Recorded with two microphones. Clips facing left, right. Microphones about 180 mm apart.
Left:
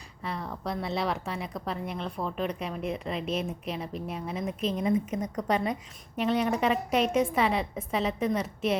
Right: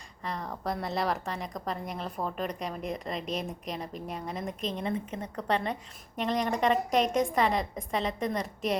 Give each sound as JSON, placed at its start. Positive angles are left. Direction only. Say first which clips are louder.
{"t": 0.3, "sound": "a woman's voice", "louder": "even", "side_deg": 0}
{"t": 3.2, "sound": "a woman's voice", "louder": "left 3 dB", "side_deg": -35}
{"t": 3.7, "sound": "a woman's voice", "louder": "left 2 dB", "side_deg": 5}